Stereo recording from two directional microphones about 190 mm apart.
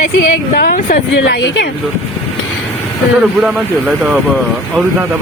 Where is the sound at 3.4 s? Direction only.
5° right (ahead or behind).